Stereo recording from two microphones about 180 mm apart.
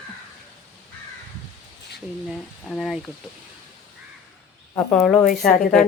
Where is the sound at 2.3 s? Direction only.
Centre (ahead or behind).